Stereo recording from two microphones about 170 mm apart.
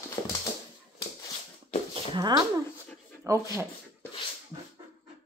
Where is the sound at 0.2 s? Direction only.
20° left (ahead or behind).